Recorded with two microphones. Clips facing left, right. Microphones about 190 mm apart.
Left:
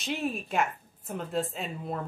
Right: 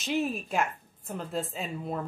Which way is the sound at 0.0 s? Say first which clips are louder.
Right 2 dB; centre (ahead or behind).